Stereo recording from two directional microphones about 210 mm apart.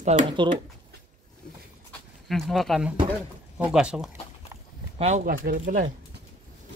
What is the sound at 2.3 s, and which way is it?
Speech, centre (ahead or behind).